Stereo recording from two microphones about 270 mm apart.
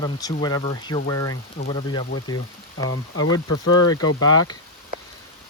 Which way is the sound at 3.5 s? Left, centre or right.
Left.